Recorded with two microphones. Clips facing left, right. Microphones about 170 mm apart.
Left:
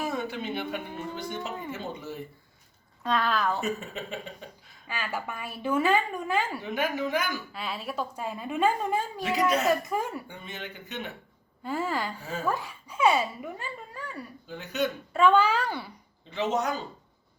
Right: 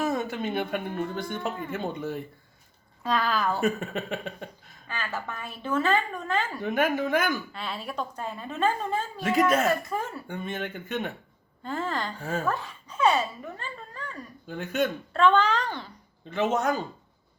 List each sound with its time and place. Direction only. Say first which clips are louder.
0.0 s speech: right 3 dB; 45° right (ahead or behind)
3.0 s speech: even; centre (ahead or behind)
3.6 s speech: right 5 dB; 60° right (ahead or behind)
4.9 s a woman's voice: even; 10° left (ahead or behind)
6.6 s speech: right 4 dB; 50° right (ahead or behind)
7.5 s a woman's voice: even; 5° left (ahead or behind)
10.2 s speech: right 7 dB; 55° right (ahead or behind)
11.6 s a woman's voice: left 1 dB; 10° left (ahead or behind)
14.4 s speech: right 3 dB; 50° right (ahead or behind)
15.1 s a woman's voice: left 1 dB; 10° left (ahead or behind)
16.3 s speech: right 3 dB; 50° right (ahead or behind)